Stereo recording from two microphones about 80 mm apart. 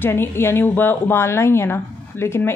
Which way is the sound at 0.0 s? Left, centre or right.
Left.